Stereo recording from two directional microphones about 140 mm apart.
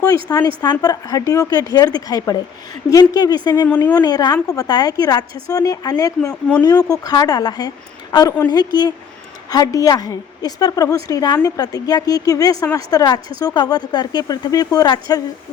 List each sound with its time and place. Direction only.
0.0 s speech: 25° left (ahead or behind)
3.7 s a woman's voice: 10° left (ahead or behind)
3.9 s speech: 30° left (ahead or behind)